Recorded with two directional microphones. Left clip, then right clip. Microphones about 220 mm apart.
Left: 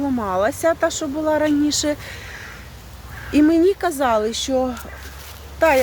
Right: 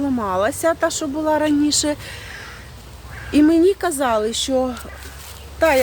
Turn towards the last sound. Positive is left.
turn(degrees=-5)  # may be behind; listen again after turning